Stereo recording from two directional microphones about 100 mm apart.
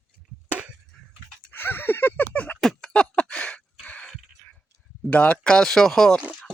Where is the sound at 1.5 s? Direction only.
20° left (ahead or behind).